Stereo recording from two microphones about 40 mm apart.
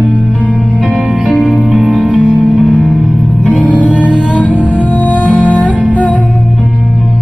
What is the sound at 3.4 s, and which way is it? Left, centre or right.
Music, left.